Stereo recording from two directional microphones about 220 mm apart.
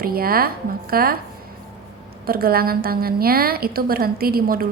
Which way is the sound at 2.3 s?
45° right (ahead or behind).